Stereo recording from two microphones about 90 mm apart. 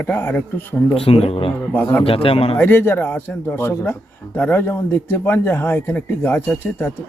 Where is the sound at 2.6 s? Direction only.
25° left (ahead or behind).